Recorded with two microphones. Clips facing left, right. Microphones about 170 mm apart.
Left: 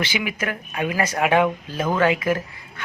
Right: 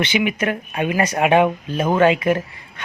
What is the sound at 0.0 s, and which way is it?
Speech, 25° right (ahead or behind).